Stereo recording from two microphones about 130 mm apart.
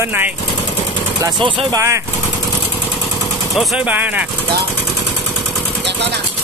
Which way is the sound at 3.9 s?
10° right (ahead or behind).